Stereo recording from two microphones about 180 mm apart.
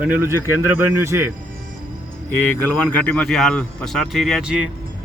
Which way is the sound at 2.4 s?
10° left (ahead or behind).